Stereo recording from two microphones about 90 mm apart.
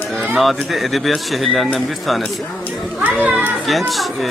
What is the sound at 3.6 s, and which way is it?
Speech, centre (ahead or behind).